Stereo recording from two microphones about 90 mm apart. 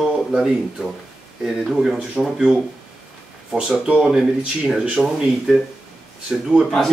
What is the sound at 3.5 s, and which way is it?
Speech, 10° right (ahead or behind).